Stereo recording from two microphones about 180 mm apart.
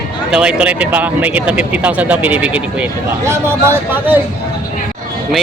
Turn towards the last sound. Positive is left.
turn(degrees=-10)  # may be behind; listen again after turning